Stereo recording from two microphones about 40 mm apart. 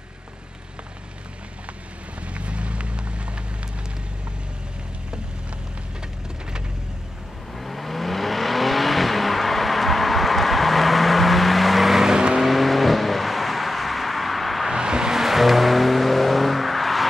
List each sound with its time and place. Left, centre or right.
2.3 s a sound: right
7.5 s vehicle: centre
12.4 s vehicle: centre
14.7 s vehicle: centre
15.1 s music: centre